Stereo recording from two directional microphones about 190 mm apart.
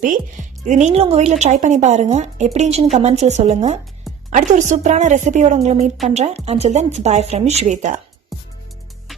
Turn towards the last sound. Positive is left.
turn(degrees=-40)  # may be behind; listen again after turning